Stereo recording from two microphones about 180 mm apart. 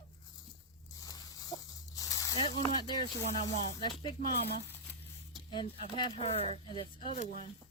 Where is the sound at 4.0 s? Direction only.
25° left (ahead or behind).